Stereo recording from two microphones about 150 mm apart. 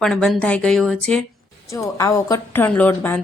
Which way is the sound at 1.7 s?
20° left (ahead or behind).